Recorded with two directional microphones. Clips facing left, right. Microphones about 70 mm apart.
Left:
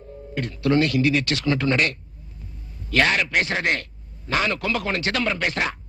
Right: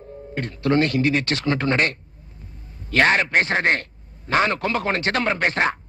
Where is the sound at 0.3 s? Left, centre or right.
Right.